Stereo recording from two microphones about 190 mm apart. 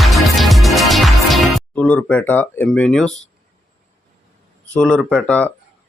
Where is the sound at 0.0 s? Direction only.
Centre (ahead or behind).